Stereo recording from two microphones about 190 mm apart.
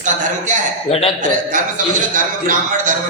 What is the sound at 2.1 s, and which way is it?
Speech, 45° right (ahead or behind).